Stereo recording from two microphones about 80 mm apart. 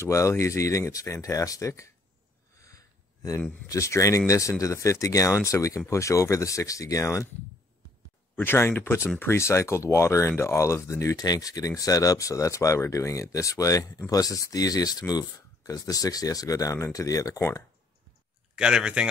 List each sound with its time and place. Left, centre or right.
0.0 s speech: left
2.6 s a sound: left
3.6 s speech: left
8.4 s speech: left
18.6 s speech: centre